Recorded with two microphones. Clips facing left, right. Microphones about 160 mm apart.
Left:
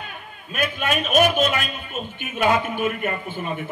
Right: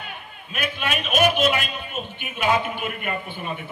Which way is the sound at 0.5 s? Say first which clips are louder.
Left 3 dB; 45° left (ahead or behind).